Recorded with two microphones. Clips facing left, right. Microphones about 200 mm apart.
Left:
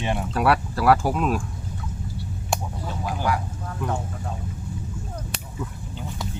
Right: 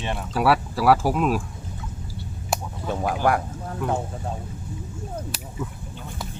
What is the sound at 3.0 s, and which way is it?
Speech, 55° right (ahead or behind).